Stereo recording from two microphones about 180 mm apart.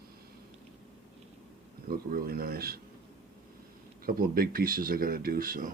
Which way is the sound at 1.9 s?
55° right (ahead or behind).